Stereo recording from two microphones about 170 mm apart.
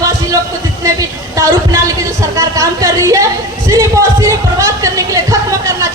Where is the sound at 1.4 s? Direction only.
15° right (ahead or behind).